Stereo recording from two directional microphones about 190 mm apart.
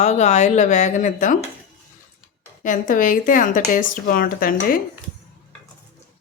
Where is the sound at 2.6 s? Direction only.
45° left (ahead or behind).